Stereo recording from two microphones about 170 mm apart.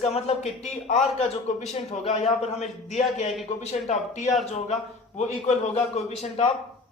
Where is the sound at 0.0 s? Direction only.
40° left (ahead or behind).